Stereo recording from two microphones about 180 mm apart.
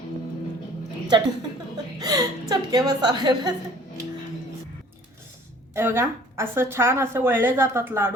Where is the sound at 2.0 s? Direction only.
20° right (ahead or behind).